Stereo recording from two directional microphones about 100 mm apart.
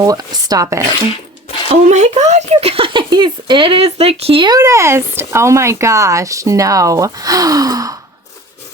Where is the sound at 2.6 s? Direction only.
65° right (ahead or behind).